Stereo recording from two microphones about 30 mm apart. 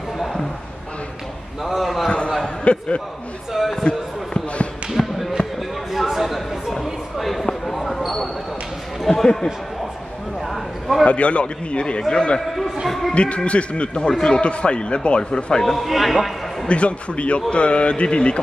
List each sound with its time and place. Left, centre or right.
1.6 s a sound: centre
2.0 s a sound: left
3.5 s speech: centre
5.0 s basketball bounce: left
5.9 s a sound: centre
7.6 s basketball bounce: centre
9.0 s speech: centre
10.5 s a sound: centre
11.1 s a man's voice: left
12.8 s a man's voice: centre
13.1 s a man's voice: left
15.6 s a man's voice: centre
16.6 s a man's voice: left